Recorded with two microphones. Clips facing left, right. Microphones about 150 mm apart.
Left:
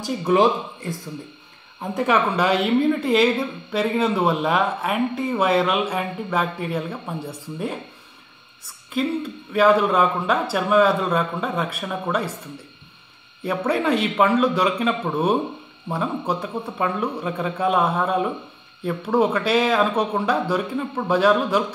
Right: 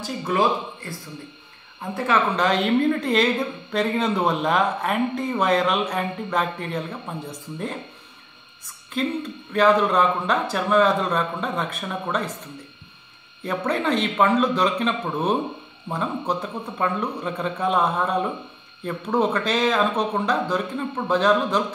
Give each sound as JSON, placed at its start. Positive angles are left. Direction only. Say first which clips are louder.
{"t": 0.0, "sound": "a woman's voice", "louder": "left 4 dB", "side_deg": 20}
{"t": 9.0, "sound": "a man's voice", "louder": "left 2 dB", "side_deg": 10}
{"t": 13.4, "sound": "a man's voice", "louder": "left 2 dB", "side_deg": 10}